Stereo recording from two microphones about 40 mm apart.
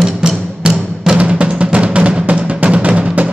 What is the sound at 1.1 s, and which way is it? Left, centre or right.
Music, right.